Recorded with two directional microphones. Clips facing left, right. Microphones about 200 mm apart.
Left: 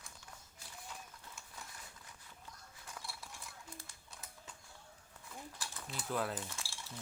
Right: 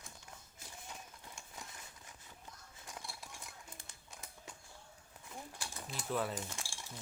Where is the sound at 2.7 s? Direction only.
20° right (ahead or behind).